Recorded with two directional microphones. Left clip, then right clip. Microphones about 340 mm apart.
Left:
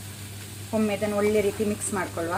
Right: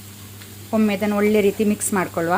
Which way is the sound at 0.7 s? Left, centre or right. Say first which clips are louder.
Right 5 dB; right.